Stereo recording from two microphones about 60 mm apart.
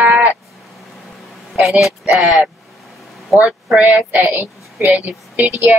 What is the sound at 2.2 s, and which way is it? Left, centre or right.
Speech, right.